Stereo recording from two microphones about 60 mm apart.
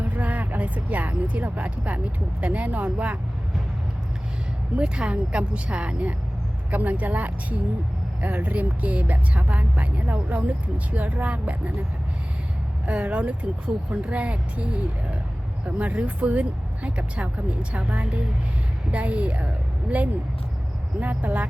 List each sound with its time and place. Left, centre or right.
0.1 s speech: right
4.8 s speech: centre
12.8 s speech: right
15.6 s speech: right
21.0 s speech: right